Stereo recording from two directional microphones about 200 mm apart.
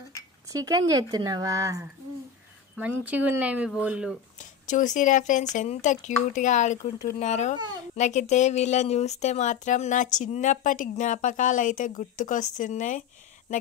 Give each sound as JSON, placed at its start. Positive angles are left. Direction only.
{"t": 0.7, "sound": "speech", "side_deg": -20}
{"t": 4.4, "sound": "speech", "side_deg": 40}